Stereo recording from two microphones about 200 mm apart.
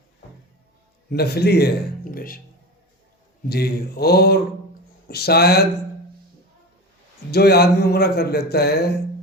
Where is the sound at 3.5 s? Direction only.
50° left (ahead or behind).